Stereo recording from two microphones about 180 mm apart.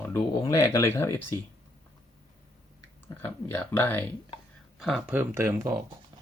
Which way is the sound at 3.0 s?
10° left (ahead or behind).